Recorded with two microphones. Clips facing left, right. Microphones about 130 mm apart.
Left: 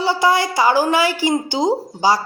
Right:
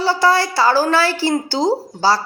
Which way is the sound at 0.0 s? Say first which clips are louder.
Right 1 dB; 20° left (ahead or behind).